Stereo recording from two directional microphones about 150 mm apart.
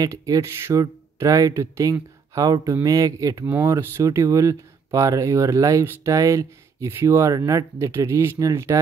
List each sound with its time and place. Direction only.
0.0 s speech: 20° right (ahead or behind)